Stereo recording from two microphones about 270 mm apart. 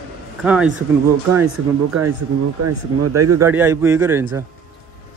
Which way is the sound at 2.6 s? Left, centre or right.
Right.